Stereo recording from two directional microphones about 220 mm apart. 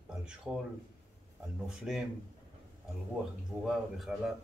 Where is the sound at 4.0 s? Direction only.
Centre (ahead or behind).